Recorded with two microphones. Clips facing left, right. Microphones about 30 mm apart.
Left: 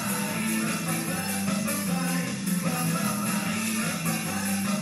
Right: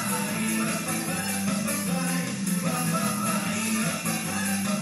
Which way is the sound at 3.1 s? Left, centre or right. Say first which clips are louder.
Right 1 dB; right.